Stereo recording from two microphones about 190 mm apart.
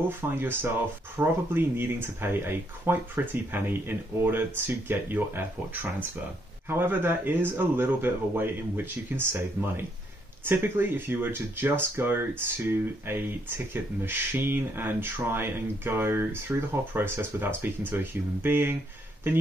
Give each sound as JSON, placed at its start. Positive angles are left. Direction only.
{"t": 0.4, "sound": "speech", "side_deg": -10}